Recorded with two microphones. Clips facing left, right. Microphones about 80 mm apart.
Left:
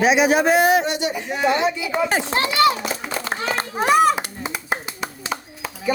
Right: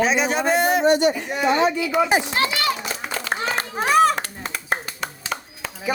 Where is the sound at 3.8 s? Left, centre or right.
Centre.